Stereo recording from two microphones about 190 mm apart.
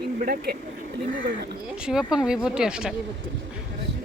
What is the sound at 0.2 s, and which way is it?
Speech, 55° right (ahead or behind).